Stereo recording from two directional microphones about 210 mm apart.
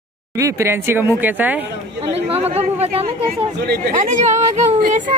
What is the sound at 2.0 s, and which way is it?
A woman's voice, 30° right (ahead or behind).